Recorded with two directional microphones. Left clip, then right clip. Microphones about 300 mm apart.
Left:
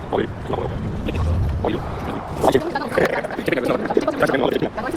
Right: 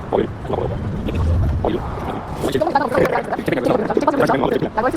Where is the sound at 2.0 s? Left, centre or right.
Left.